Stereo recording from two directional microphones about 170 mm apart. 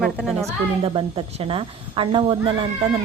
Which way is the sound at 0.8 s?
35° right (ahead or behind).